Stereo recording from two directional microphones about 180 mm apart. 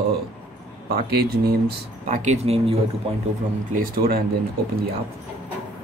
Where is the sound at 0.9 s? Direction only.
60° right (ahead or behind).